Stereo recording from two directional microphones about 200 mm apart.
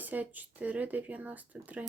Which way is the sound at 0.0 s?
10° right (ahead or behind).